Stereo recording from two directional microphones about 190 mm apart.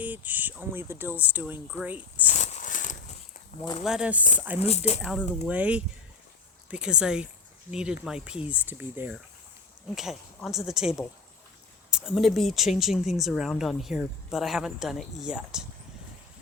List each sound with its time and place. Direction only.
0.0 s speech: 10° right (ahead or behind)
2.3 s a sound: 40° left (ahead or behind)
3.8 s a woman's voice: 5° right (ahead or behind)